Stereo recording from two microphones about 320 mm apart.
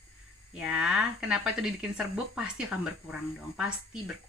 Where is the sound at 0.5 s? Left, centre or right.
Centre.